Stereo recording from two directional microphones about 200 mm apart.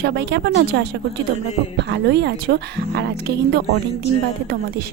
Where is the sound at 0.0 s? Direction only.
55° right (ahead or behind).